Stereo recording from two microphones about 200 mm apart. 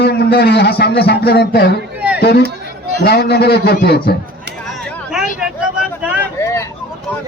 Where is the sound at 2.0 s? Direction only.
5° right (ahead or behind).